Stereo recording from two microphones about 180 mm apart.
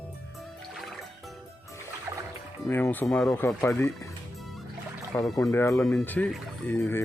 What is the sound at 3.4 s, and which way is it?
Speech, 15° left (ahead or behind).